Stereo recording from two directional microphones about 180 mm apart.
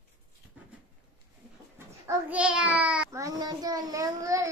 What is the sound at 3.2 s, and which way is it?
Speech, 20° right (ahead or behind).